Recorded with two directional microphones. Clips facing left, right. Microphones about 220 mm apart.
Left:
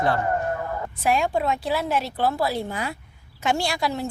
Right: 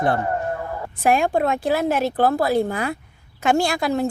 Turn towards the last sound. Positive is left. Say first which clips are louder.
# right 6 dB
turn(degrees=-55)  # may be behind; listen again after turning